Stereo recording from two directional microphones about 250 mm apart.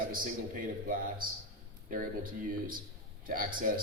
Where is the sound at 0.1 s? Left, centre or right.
Right.